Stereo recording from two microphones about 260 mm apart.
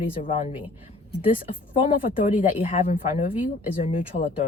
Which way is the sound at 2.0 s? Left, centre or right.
Left.